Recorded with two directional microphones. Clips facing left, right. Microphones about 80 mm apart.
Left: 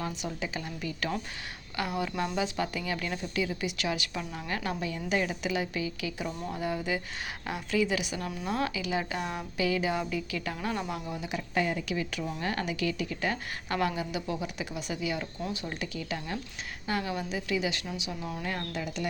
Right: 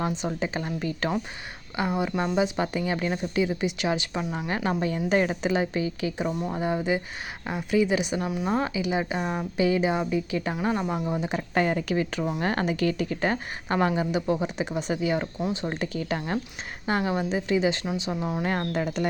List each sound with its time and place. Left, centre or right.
0.2 s a woman's voice: right
1.7 s a woman's voice: right
8.2 s speech: centre
8.4 s a woman's voice: right
16.8 s a woman's voice: right
18.5 s speech: right